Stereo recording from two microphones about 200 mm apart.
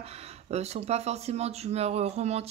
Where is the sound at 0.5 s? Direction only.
30° right (ahead or behind).